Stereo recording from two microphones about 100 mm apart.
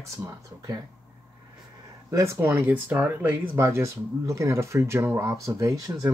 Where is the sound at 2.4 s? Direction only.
20° right (ahead or behind).